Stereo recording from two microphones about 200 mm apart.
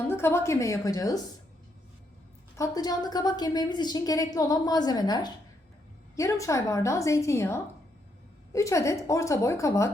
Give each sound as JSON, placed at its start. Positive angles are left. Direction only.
{"t": 0.1, "sound": "a woman's voice", "side_deg": 10}
{"t": 2.6, "sound": "a woman's voice", "side_deg": 20}